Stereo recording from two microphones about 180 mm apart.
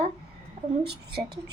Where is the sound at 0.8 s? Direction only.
65° right (ahead or behind).